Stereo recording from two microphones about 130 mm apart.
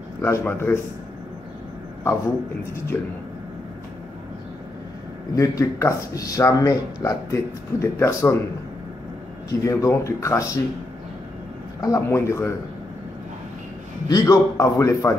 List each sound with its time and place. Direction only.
0.2 s speech: 20° left (ahead or behind)
5.3 s speech: 25° left (ahead or behind)
9.5 s speech: 25° left (ahead or behind)
11.8 s speech: 25° left (ahead or behind)
14.0 s speech: 30° left (ahead or behind)